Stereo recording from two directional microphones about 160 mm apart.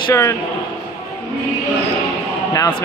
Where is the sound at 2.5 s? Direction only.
20° left (ahead or behind).